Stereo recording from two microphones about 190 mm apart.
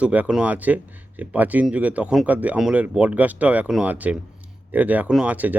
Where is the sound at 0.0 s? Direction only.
5° right (ahead or behind).